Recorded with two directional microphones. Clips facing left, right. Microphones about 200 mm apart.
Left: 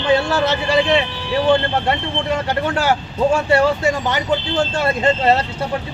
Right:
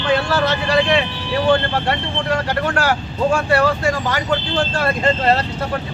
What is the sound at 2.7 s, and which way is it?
Speech, 20° left (ahead or behind).